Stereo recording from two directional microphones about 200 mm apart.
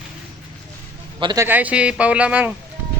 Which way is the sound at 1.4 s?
10° right (ahead or behind).